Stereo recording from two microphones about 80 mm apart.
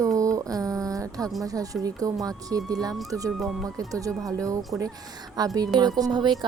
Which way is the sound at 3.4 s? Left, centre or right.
Centre.